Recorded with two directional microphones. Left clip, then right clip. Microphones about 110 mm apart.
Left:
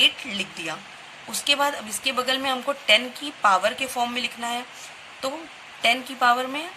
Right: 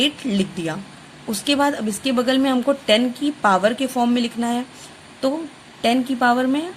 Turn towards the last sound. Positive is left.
turn(degrees=-80)